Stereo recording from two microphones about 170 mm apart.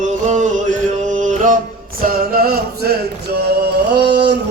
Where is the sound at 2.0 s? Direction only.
60° right (ahead or behind).